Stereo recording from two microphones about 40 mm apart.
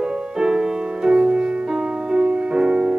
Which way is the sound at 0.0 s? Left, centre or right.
Centre.